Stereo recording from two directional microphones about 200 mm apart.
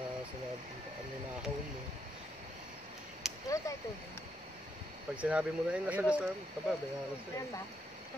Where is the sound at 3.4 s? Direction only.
15° left (ahead or behind).